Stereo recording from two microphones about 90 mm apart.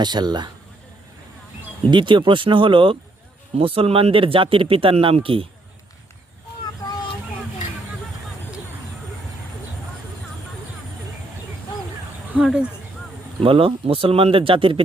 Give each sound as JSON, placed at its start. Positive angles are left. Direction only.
{"t": 0.0, "sound": "speech", "side_deg": -50}
{"t": 1.9, "sound": "speech", "side_deg": -60}
{"t": 3.6, "sound": "speech", "side_deg": -90}
{"t": 12.4, "sound": "speech", "side_deg": -5}
{"t": 13.4, "sound": "speech", "side_deg": -90}